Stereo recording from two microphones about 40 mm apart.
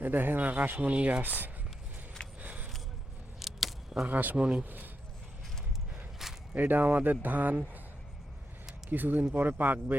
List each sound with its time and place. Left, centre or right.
0.0 s rub: right
2.4 s vehicle: right
3.4 s keys jangling: centre
4.0 s rub: right
4.4 s speech: right
4.6 s rub: right
6.5 s rub: right
8.9 s rub: right
9.3 s a man's voice: right